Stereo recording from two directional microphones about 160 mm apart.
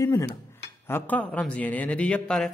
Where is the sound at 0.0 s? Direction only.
20° left (ahead or behind).